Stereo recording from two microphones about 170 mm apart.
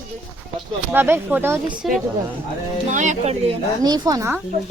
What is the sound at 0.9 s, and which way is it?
Speech, 10° right (ahead or behind).